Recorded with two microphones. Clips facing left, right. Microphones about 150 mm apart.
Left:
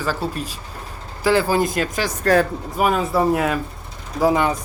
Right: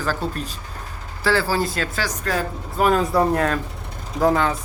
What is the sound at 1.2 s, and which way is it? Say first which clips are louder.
Speech: left 3 dB; 20° left (ahead or behind).